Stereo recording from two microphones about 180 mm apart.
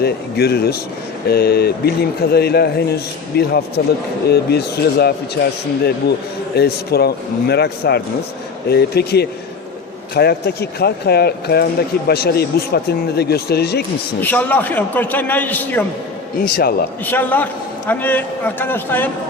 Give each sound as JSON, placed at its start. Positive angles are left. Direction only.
{"t": 0.0, "sound": "speech", "side_deg": 60}
{"t": 6.6, "sound": "speech", "side_deg": 60}
{"t": 14.2, "sound": "a man's voice", "side_deg": 10}
{"t": 16.4, "sound": "speech", "side_deg": 55}
{"t": 17.1, "sound": "a man's voice", "side_deg": 10}